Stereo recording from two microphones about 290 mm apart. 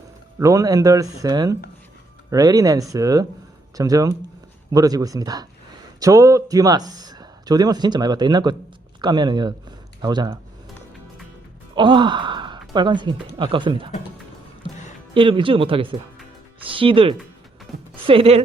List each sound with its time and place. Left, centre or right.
0.3 s speech: centre
11.7 s speech: centre
15.1 s speech: centre
17.7 s music: centre
18.0 s speech: centre